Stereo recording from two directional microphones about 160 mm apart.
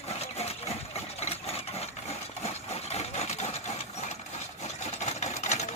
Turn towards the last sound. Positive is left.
turn(degrees=45)  # may be behind; listen again after turning